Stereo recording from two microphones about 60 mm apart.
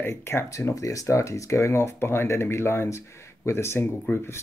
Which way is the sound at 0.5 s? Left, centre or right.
Left.